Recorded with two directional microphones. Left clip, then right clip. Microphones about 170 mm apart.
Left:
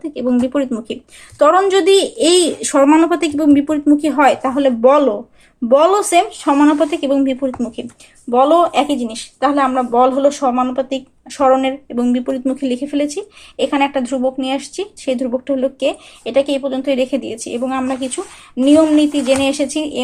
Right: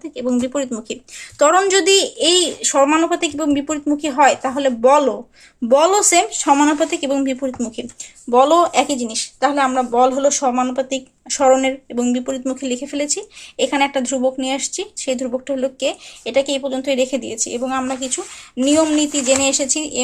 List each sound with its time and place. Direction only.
0.0 s speech: 10° right (ahead or behind)
1.4 s speech: 30° right (ahead or behind)
1.9 s speech: 5° right (ahead or behind)
2.1 s speech: 10° left (ahead or behind); by 5.1 s 10° right (ahead or behind)
5.6 s speech: 25° right (ahead or behind)